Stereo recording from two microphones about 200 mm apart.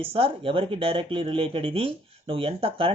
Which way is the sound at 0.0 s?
25° right (ahead or behind).